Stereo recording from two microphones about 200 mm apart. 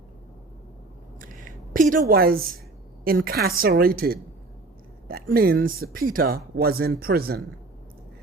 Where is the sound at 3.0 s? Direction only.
45° right (ahead or behind).